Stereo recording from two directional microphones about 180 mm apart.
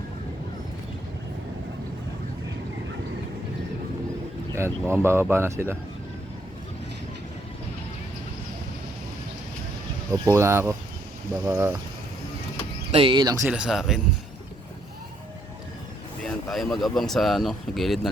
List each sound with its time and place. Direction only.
4.5 s speech: 15° right (ahead or behind)
10.1 s speech: 15° right (ahead or behind)
12.9 s speech: 30° right (ahead or behind)
13.5 s speech: 5° right (ahead or behind)
16.2 s speech: centre (ahead or behind)